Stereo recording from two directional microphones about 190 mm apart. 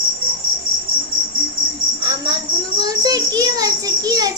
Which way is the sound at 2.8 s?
20° right (ahead or behind).